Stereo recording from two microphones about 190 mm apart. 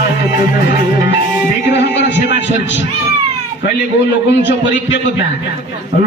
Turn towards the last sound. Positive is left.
turn(degrees=70)  # may be behind; listen again after turning